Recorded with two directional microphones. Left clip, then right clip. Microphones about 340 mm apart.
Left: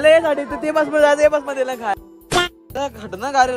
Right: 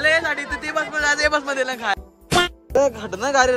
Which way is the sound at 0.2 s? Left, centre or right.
Centre.